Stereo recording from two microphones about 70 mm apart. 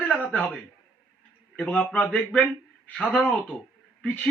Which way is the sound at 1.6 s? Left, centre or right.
Centre.